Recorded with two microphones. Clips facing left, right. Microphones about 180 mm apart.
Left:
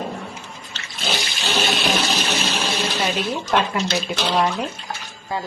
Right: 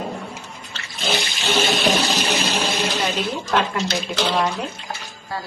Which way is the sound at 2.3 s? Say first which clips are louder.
Right 2 dB; 10° right (ahead or behind).